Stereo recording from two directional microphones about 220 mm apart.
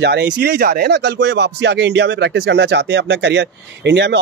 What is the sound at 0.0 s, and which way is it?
Speech, 50° right (ahead or behind).